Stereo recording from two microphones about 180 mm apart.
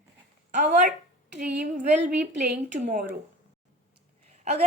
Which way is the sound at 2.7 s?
40° right (ahead or behind).